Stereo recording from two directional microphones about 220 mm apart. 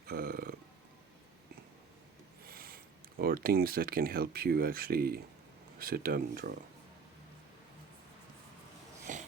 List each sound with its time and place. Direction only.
0.1 s speech: 45° right (ahead or behind)
2.5 s speech: 40° right (ahead or behind)
9.1 s wheeze: 35° right (ahead or behind)